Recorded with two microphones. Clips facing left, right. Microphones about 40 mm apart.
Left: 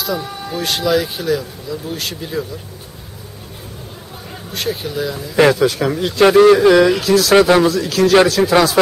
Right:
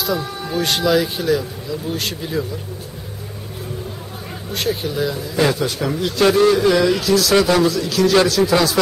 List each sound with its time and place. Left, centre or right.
0.5 s speech: centre
4.5 s speech: centre
5.3 s speech: left
6.2 s speech: left